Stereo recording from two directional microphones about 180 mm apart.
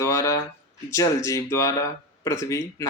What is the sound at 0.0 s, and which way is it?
Speech, 15° left (ahead or behind).